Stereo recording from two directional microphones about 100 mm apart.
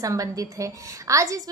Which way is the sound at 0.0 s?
35° right (ahead or behind).